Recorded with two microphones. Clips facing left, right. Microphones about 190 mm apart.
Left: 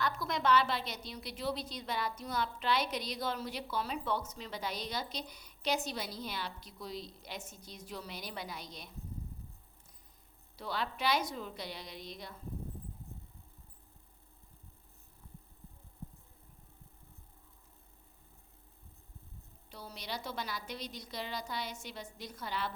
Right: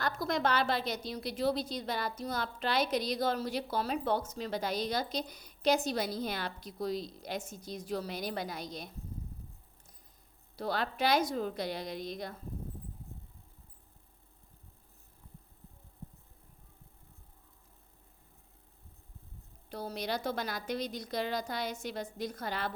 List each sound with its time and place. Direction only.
0.0 s a woman's voice: 40° right (ahead or behind)
10.6 s a woman's voice: 40° right (ahead or behind)
19.7 s a woman's voice: 45° right (ahead or behind)